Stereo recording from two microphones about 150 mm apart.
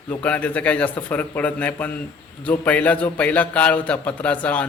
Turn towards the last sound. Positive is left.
turn(degrees=10)  # may be behind; listen again after turning